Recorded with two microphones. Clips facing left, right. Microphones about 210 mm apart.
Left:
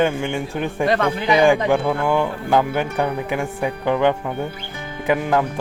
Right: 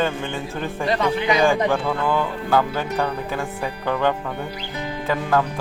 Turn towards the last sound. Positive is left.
turn(degrees=15)  # may be behind; listen again after turning